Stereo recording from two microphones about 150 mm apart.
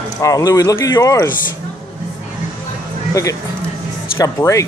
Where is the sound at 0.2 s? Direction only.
25° left (ahead or behind).